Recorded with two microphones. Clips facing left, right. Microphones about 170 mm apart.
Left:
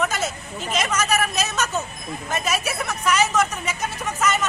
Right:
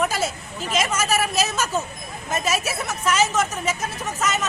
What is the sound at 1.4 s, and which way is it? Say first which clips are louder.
Speech: right 1 dB; 5° right (ahead or behind).